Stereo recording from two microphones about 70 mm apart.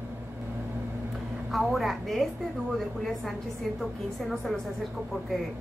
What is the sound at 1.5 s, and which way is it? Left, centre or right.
A woman's voice, centre.